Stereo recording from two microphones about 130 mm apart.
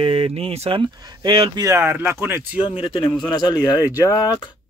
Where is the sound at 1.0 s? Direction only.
30° right (ahead or behind).